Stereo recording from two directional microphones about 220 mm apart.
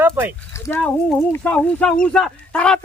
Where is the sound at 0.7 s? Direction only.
10° left (ahead or behind).